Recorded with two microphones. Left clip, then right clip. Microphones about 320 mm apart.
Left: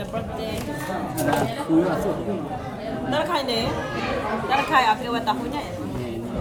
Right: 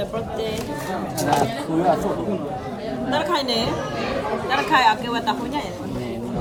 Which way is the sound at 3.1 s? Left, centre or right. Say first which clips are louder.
Right 2 dB; centre.